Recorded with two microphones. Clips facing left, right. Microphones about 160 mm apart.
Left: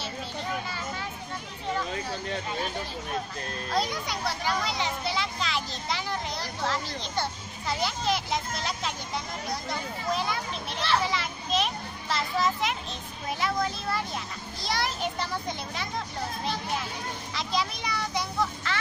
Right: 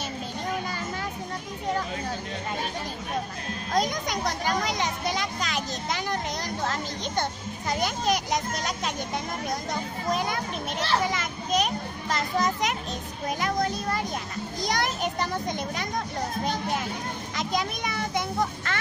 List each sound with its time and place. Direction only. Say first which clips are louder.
3.7 s a child's voice: right 3 dB; 45° right (ahead or behind)
14.6 s a sound: right 2 dB; 45° right (ahead or behind)
17.4 s a child's voice: right 2 dB; 50° right (ahead or behind)